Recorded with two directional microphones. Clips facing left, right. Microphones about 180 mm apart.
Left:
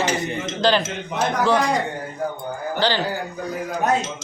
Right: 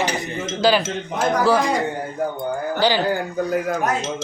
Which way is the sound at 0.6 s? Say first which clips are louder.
Right 2 dB; 10° right (ahead or behind).